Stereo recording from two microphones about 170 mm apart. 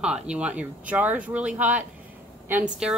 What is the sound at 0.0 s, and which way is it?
Speech, 5° right (ahead or behind).